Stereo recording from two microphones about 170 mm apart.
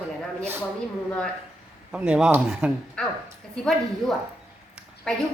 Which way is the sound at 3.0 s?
5° left (ahead or behind).